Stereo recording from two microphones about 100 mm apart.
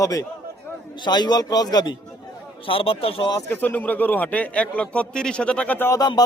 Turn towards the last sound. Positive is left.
turn(degrees=40)  # may be behind; listen again after turning